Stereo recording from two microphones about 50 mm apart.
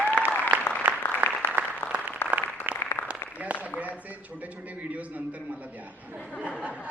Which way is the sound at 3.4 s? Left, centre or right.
Right.